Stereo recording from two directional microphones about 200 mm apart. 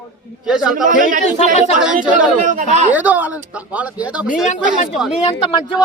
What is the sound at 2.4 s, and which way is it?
Speech, 35° right (ahead or behind).